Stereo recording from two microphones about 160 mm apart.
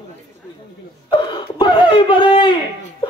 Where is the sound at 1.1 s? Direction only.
30° left (ahead or behind).